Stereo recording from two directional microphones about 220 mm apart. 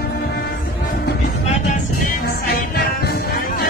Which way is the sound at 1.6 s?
40° left (ahead or behind).